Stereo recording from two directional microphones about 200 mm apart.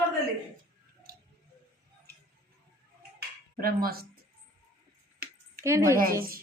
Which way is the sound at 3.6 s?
45° right (ahead or behind).